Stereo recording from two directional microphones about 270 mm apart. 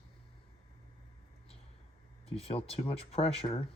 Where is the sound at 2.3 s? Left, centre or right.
Left.